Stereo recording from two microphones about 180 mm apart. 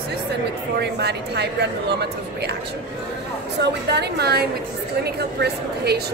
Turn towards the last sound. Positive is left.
turn(degrees=-65)  # may be behind; listen again after turning